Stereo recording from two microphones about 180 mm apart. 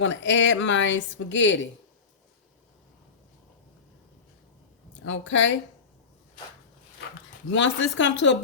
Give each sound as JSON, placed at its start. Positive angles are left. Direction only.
{"t": 0.0, "sound": "speech", "side_deg": 90}
{"t": 5.0, "sound": "speech", "side_deg": 90}
{"t": 7.5, "sound": "speech", "side_deg": 90}